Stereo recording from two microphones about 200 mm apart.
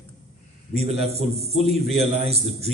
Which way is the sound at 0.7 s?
30° right (ahead or behind).